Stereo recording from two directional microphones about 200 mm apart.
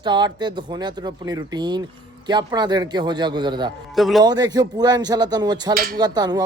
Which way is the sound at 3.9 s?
Centre (ahead or behind).